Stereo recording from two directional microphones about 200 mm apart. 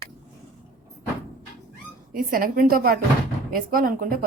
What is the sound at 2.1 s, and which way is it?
A woman's voice, 45° right (ahead or behind).